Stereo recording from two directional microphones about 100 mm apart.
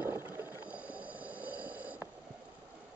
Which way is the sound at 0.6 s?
10° right (ahead or behind).